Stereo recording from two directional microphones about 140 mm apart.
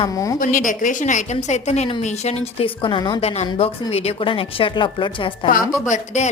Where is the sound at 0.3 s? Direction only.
70° left (ahead or behind); by 2.6 s 50° left (ahead or behind).